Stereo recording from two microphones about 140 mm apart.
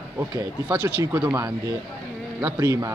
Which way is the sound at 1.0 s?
15° right (ahead or behind).